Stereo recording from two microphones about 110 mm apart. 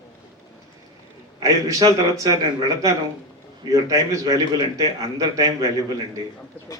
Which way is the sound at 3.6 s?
30° right (ahead or behind).